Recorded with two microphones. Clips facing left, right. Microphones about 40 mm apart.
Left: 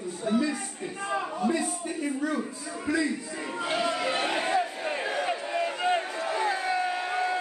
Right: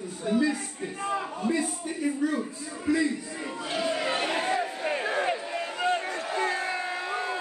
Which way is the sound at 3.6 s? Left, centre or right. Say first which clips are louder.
Left 3 dB; left.